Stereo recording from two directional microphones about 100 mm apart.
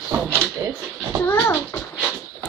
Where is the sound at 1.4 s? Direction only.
20° left (ahead or behind).